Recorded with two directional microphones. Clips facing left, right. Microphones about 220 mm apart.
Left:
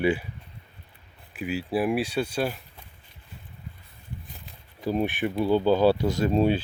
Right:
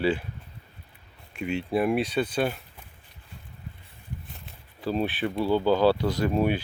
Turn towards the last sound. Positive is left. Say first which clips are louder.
# left 2 dB
turn(degrees=25)  # may be behind; listen again after turning